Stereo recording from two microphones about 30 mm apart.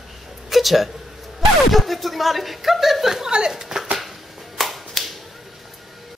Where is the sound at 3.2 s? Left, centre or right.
Right.